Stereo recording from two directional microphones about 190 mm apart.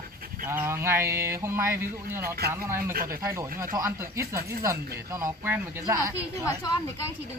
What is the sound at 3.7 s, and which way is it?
Speech, 15° right (ahead or behind).